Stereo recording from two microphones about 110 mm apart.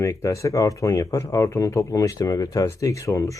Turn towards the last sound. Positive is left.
turn(degrees=30)  # may be behind; listen again after turning